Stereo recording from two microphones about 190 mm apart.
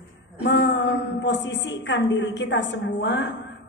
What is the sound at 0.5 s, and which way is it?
A woman's voice, 65° left (ahead or behind).